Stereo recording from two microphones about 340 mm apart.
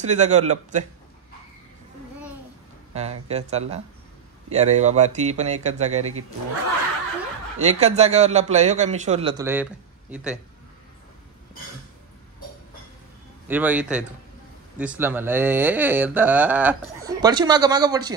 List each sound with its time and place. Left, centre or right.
0.0 s a man's voice: right
2.9 s a man's voice: centre
7.5 s a man's voice: centre
13.5 s speech: centre